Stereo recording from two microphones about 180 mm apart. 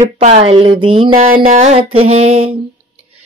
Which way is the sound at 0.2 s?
35° right (ahead or behind).